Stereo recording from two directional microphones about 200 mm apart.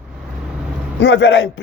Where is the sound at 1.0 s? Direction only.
60° left (ahead or behind).